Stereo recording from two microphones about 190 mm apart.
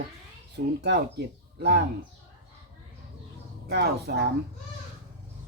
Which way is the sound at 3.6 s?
60° right (ahead or behind).